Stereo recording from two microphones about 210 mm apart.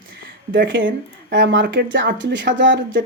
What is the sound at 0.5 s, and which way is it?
Speech, 60° right (ahead or behind).